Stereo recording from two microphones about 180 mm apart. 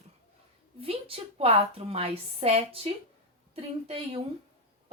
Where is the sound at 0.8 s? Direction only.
30° right (ahead or behind).